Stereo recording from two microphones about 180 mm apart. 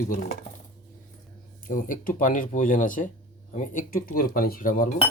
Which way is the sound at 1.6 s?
50° left (ahead or behind).